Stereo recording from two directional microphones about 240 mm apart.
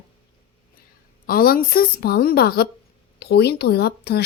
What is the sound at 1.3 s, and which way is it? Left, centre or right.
A woman's voice, left.